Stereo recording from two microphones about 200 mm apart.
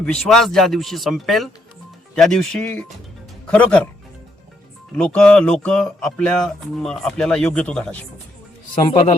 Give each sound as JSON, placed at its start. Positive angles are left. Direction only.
{"t": 0.0, "sound": "speech", "side_deg": 0}
{"t": 4.9, "sound": "speech", "side_deg": 5}
{"t": 8.8, "sound": "speech", "side_deg": 25}